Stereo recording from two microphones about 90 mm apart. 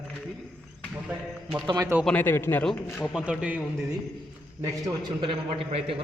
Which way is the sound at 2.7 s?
5° right (ahead or behind).